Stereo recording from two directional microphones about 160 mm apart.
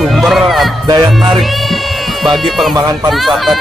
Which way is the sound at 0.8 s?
25° right (ahead or behind).